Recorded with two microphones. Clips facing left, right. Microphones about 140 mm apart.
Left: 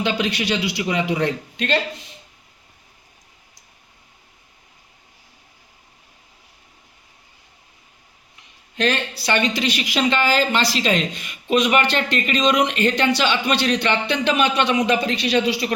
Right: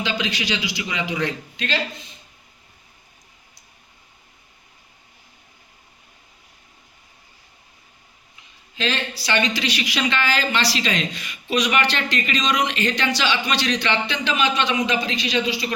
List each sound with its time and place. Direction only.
0.0 s a man's voice: 55° left (ahead or behind)
8.7 s a man's voice: 55° left (ahead or behind)